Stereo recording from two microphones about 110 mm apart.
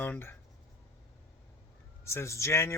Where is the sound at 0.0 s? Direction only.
20° left (ahead or behind).